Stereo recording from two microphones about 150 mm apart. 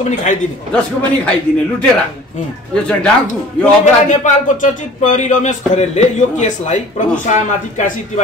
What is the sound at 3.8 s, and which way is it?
Speech, 55° left (ahead or behind).